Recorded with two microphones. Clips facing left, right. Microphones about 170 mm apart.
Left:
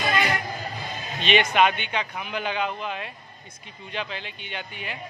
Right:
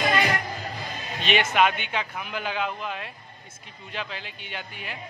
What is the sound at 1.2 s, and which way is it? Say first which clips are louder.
A man's voice: left 2 dB; 5° right (ahead or behind).